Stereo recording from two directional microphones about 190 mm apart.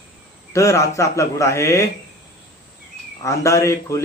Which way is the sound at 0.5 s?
15° left (ahead or behind).